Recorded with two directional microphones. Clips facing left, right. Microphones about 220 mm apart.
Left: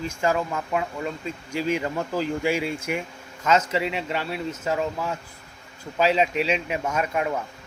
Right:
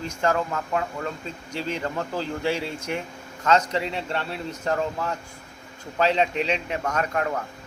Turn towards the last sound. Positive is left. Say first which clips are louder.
# left 1 dB
turn(degrees=10)  # may be behind; listen again after turning